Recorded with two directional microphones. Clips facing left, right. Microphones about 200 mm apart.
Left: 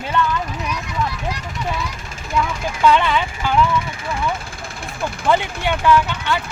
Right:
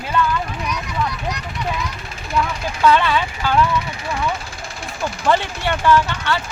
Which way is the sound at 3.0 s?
15° left (ahead or behind).